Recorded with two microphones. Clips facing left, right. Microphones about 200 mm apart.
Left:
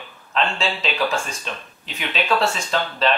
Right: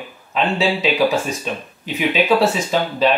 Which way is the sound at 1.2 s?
5° right (ahead or behind).